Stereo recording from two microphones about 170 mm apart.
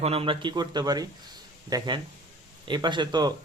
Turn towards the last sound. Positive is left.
turn(degrees=-25)  # may be behind; listen again after turning